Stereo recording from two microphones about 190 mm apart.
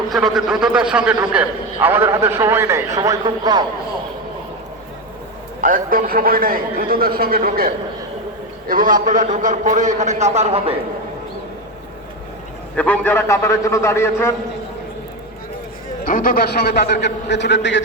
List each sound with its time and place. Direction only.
0.1 s a man's voice: centre (ahead or behind); by 3.7 s 25° right (ahead or behind)
5.5 s a man's voice: 45° right (ahead or behind)
12.7 s a man's voice: 10° left (ahead or behind)
16.0 s a man's voice: 45° left (ahead or behind); by 17.8 s 70° left (ahead or behind)